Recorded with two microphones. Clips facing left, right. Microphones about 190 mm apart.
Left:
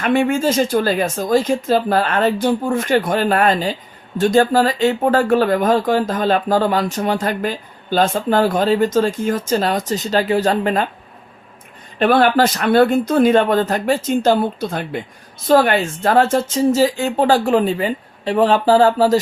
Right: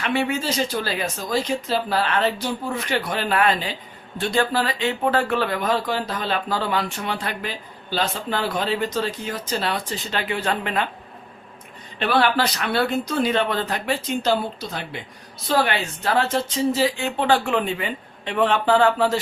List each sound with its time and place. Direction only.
0.0 s speech: 50° left (ahead or behind)
11.9 s a woman's voice: 45° left (ahead or behind)